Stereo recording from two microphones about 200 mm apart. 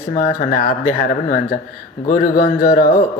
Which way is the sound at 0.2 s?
45° left (ahead or behind).